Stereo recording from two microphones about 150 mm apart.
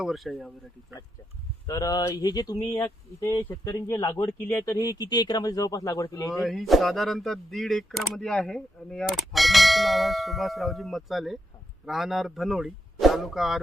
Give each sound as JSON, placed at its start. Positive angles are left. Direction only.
{"t": 0.0, "sound": "speech", "side_deg": 0}
{"t": 1.6, "sound": "speech", "side_deg": 25}
{"t": 6.4, "sound": "speech", "side_deg": 0}